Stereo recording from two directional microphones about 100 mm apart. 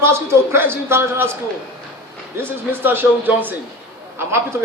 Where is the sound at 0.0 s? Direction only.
25° right (ahead or behind).